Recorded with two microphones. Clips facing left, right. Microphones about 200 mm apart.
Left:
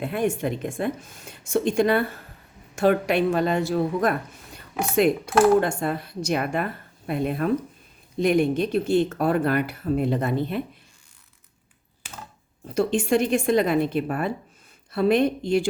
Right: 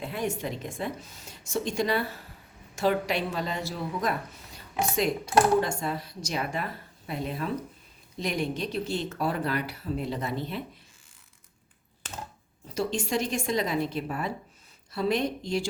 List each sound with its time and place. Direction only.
0.0 s a woman's voice: 55° left (ahead or behind)
12.0 s a sound: 10° left (ahead or behind)
12.6 s a woman's voice: 55° left (ahead or behind)